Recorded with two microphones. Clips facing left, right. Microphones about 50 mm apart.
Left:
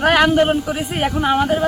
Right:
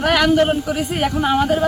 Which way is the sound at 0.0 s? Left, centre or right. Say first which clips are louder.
Left 3 dB; left.